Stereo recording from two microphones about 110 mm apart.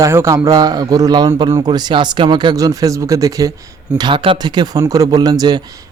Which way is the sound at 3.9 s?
45° right (ahead or behind).